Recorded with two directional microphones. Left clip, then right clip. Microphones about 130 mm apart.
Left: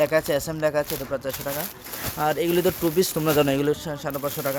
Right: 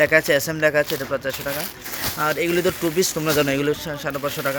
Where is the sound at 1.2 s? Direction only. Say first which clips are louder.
Right 3 dB; 15° left (ahead or behind).